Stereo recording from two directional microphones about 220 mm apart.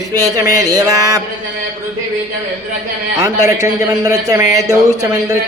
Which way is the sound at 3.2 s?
15° right (ahead or behind).